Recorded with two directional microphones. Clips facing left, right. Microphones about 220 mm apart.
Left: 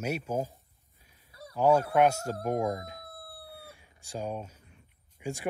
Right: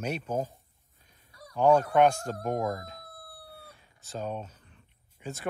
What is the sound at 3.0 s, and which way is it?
Crowing, 25° left (ahead or behind).